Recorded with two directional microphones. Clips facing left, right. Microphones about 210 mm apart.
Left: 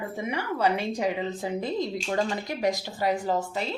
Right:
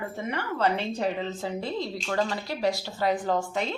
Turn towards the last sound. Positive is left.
turn(degrees=5)  # may be behind; listen again after turning